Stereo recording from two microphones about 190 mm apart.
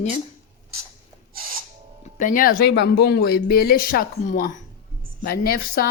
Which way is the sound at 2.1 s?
45° left (ahead or behind).